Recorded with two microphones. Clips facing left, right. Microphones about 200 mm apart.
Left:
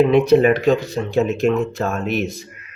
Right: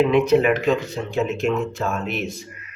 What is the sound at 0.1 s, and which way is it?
Speech, 35° left (ahead or behind).